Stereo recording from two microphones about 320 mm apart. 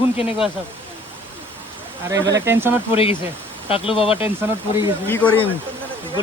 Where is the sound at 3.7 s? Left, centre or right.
Centre.